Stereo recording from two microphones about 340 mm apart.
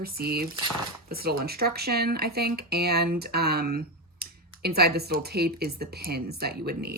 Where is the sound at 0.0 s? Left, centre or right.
Right.